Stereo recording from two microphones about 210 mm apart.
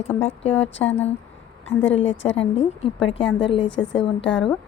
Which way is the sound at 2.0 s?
60° left (ahead or behind).